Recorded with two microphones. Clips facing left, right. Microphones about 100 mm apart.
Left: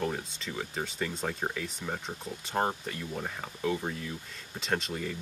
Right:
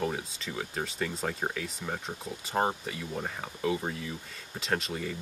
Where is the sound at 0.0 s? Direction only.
5° right (ahead or behind).